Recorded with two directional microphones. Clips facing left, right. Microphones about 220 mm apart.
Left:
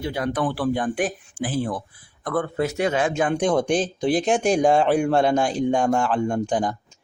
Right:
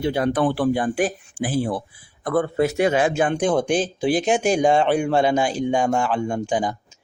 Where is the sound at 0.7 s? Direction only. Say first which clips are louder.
Right 2 dB; 5° right (ahead or behind).